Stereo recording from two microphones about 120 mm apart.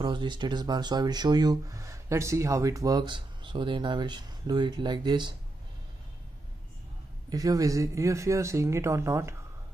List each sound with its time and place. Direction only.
0.0 s speech: 40° right (ahead or behind)
7.2 s speech: 30° right (ahead or behind)